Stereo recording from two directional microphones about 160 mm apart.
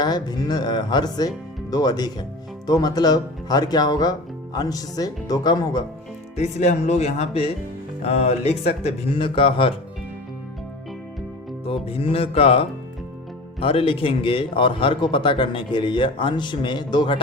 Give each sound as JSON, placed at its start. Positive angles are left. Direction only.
{"t": 0.0, "sound": "speech", "side_deg": 25}
{"t": 6.3, "sound": "speech", "side_deg": 45}
{"t": 11.6, "sound": "music", "side_deg": 35}
{"t": 13.6, "sound": "speech", "side_deg": 35}